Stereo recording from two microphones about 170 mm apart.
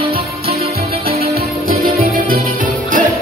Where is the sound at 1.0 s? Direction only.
65° right (ahead or behind).